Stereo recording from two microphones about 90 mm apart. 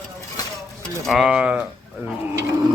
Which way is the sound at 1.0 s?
5° right (ahead or behind).